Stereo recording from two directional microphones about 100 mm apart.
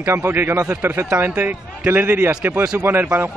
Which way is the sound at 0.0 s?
25° right (ahead or behind).